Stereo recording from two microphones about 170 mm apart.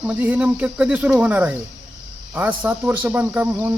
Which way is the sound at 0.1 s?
10° right (ahead or behind).